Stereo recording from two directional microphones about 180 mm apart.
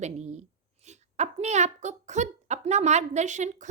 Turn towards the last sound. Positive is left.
turn(degrees=-40)  # may be behind; listen again after turning